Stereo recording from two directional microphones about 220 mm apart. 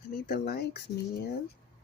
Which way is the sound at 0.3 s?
45° left (ahead or behind).